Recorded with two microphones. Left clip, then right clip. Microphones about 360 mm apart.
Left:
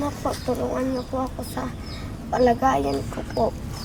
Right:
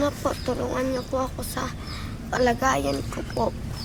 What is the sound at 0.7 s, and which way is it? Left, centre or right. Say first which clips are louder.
Speech: even; right.